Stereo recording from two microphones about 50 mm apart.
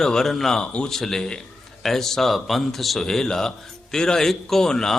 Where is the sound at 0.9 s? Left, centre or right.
Centre.